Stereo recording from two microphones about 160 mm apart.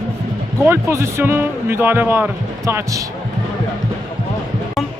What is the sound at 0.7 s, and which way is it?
Speech, 15° right (ahead or behind).